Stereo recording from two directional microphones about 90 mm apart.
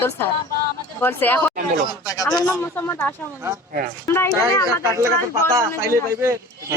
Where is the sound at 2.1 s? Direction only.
40° left (ahead or behind).